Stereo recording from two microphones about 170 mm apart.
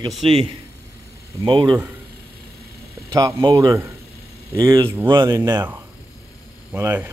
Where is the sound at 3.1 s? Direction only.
20° right (ahead or behind).